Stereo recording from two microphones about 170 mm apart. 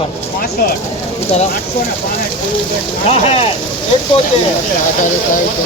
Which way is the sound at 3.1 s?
40° left (ahead or behind).